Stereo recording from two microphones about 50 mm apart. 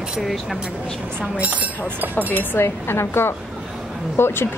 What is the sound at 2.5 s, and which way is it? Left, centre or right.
Speech, left.